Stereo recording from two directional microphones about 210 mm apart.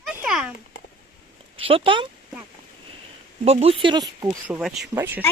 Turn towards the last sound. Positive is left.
turn(degrees=-10)  # may be behind; listen again after turning